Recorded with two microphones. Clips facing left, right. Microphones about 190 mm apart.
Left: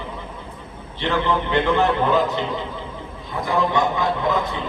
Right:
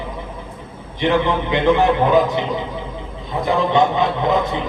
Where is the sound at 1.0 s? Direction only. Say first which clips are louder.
Right 4 dB; 15° right (ahead or behind).